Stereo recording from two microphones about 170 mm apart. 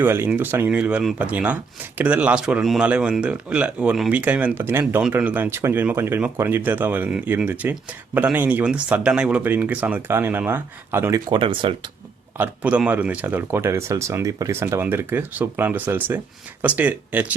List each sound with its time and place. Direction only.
0.0 s speech: 10° right (ahead or behind)
11.3 s speech: 30° right (ahead or behind)
12.4 s speech: 5° right (ahead or behind)